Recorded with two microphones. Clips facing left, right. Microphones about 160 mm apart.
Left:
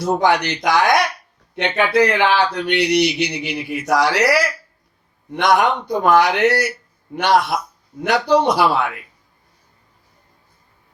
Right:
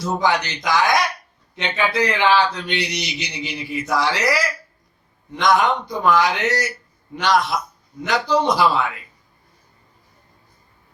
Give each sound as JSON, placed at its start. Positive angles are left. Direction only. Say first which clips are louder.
{"t": 0.0, "sound": "speech", "louder": "left 4 dB", "side_deg": 60}